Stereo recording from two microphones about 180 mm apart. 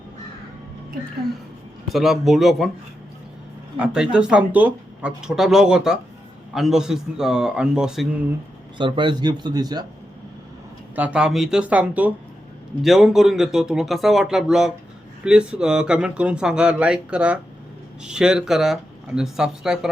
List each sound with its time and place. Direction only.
1.9 s speech: centre (ahead or behind)
3.8 s speech: 5° right (ahead or behind)
8.8 s a man's voice: 25° right (ahead or behind)
10.9 s speech: 5° right (ahead or behind)